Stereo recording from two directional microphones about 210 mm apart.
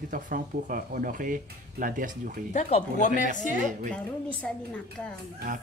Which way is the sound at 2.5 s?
35° left (ahead or behind).